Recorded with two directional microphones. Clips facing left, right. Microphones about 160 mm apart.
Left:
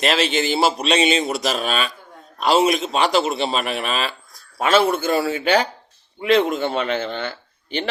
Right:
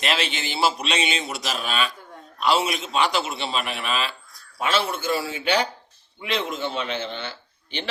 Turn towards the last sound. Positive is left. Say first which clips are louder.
# left 7 dB
turn(degrees=50)  # may be behind; listen again after turning